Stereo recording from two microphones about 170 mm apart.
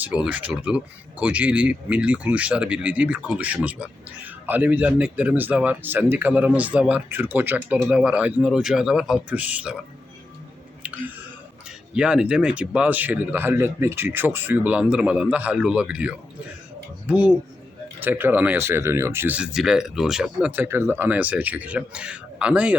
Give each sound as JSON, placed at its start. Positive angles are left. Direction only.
{"t": 0.0, "sound": "a man's voice", "side_deg": -5}
{"t": 11.9, "sound": "speech", "side_deg": -5}
{"t": 18.0, "sound": "speech", "side_deg": -10}